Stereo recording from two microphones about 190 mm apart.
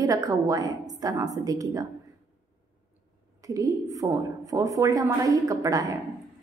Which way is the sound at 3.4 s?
20° right (ahead or behind).